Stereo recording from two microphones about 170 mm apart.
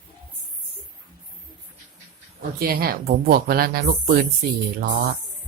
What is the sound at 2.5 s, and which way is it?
Speech, 60° right (ahead or behind).